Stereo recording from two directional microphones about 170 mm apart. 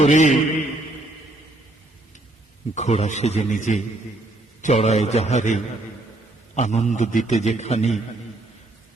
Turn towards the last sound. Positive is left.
turn(degrees=40)  # may be behind; listen again after turning